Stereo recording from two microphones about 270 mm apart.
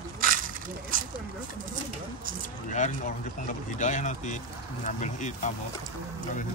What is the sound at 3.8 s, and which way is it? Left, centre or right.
Speech, left.